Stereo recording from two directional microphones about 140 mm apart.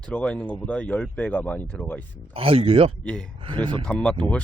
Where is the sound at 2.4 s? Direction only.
40° right (ahead or behind).